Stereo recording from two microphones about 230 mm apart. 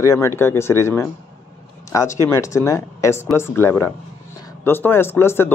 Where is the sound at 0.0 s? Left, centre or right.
Centre.